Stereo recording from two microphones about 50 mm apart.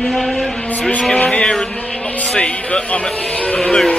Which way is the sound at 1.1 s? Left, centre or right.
Centre.